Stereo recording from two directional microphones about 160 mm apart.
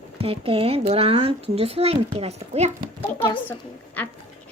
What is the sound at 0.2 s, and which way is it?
Speech, 35° right (ahead or behind).